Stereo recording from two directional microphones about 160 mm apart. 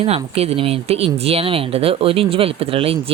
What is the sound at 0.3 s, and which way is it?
Speech, 40° right (ahead or behind).